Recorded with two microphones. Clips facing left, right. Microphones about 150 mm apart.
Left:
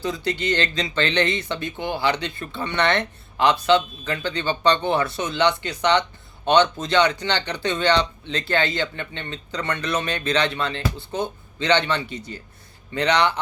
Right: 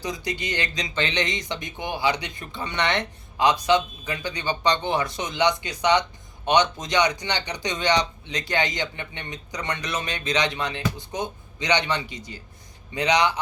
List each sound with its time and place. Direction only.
0.0 s speech: 15° right (ahead or behind)